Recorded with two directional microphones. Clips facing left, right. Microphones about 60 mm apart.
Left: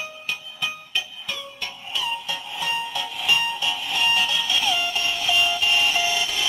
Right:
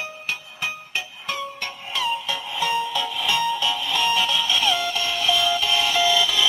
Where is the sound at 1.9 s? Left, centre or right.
Right.